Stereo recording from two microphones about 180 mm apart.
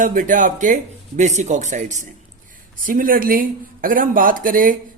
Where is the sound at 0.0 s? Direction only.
45° right (ahead or behind).